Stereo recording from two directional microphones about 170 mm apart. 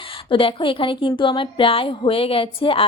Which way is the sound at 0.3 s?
30° left (ahead or behind).